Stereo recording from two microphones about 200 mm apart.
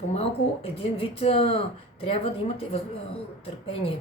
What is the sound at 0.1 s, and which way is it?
Speech, 30° left (ahead or behind).